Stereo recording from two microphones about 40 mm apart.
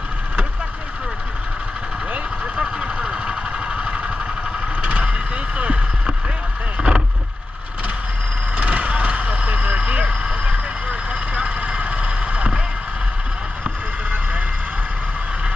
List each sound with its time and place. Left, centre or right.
2.5 s vehicle: right
6.8 s vehicle: right
8.5 s vehicle: right